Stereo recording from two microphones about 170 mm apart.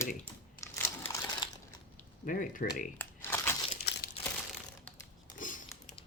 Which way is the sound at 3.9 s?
75° left (ahead or behind).